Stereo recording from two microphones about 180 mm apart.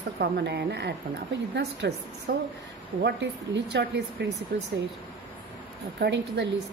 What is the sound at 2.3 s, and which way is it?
Speech, 50° right (ahead or behind).